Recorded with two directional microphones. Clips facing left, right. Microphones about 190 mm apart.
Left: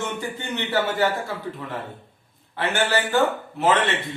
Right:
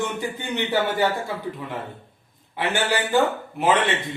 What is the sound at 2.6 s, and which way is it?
Speech, 15° right (ahead or behind).